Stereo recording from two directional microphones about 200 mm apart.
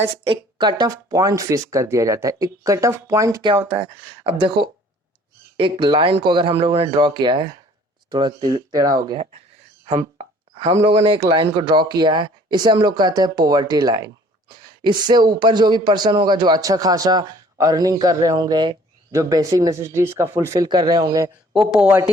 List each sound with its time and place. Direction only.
0.0 s a man's voice: 25° right (ahead or behind)
10.2 s a sound: 30° right (ahead or behind)
10.8 s a man's voice: 25° right (ahead or behind)
21.5 s speech: 5° right (ahead or behind)